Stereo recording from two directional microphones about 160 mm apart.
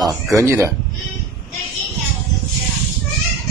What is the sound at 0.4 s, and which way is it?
Speech, 15° right (ahead or behind).